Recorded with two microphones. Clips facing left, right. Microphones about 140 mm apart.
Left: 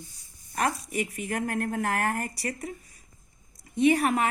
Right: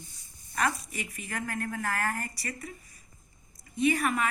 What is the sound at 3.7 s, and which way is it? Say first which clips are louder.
Speech: left 5 dB; 65° left (ahead or behind).